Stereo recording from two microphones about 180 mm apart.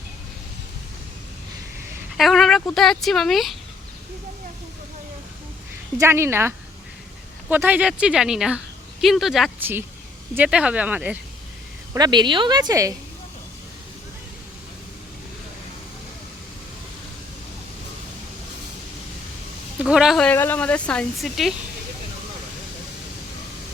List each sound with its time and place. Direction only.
2.1 s speech: centre (ahead or behind)
6.0 s speech: 15° right (ahead or behind)
7.5 s a woman's voice: 10° right (ahead or behind)
11.9 s a woman's voice: 25° right (ahead or behind)
19.8 s a woman's voice: 5° right (ahead or behind)